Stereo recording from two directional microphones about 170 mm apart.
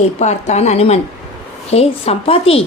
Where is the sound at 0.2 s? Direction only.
40° left (ahead or behind).